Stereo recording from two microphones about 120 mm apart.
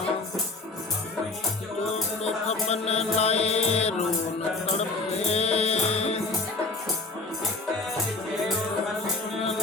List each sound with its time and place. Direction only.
2.2 s music: 65° left (ahead or behind)